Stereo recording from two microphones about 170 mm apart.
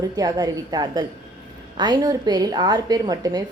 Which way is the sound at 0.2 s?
20° right (ahead or behind).